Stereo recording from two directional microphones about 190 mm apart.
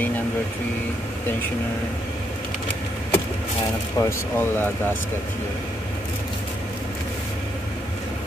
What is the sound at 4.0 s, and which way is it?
Speech, 15° left (ahead or behind).